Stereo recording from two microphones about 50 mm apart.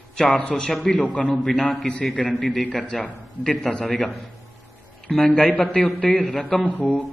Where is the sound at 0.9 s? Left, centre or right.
Left.